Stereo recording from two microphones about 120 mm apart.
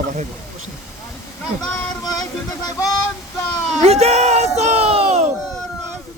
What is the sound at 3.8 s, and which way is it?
Music, 60° right (ahead or behind).